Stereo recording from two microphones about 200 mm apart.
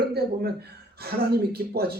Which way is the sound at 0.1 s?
50° right (ahead or behind).